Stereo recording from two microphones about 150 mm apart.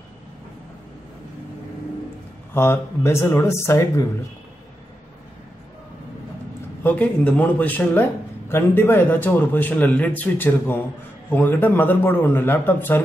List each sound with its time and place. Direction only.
2.5 s speech: 15° left (ahead or behind)
6.8 s speech: 10° left (ahead or behind)